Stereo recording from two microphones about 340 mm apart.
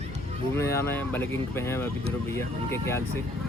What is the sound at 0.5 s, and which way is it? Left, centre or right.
Speech, centre.